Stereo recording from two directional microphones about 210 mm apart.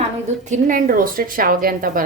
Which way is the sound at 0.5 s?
40° right (ahead or behind).